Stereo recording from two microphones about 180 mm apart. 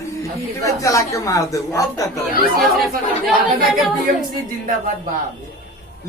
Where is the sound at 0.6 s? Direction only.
15° left (ahead or behind).